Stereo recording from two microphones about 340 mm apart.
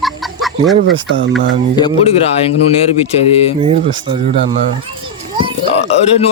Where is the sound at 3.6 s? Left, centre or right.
Centre.